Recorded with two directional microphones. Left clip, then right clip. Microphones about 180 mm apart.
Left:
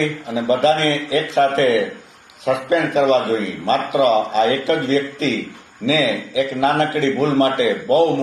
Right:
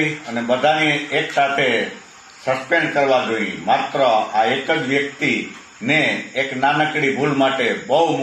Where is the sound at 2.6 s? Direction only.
25° left (ahead or behind).